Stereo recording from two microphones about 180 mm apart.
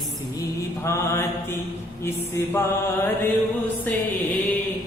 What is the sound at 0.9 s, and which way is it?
Mantra, 15° left (ahead or behind).